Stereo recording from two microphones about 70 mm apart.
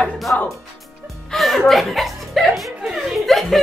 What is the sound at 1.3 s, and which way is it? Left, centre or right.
Chuckle, centre.